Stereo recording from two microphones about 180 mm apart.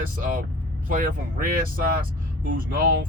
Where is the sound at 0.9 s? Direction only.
50° right (ahead or behind).